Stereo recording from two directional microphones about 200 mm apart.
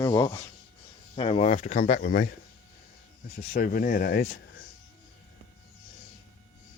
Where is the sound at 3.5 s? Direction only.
45° left (ahead or behind).